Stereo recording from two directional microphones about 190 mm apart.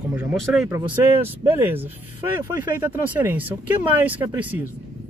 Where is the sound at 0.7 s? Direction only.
15° right (ahead or behind).